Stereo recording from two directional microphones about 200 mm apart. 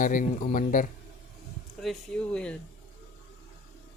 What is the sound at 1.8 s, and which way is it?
Speech, centre (ahead or behind).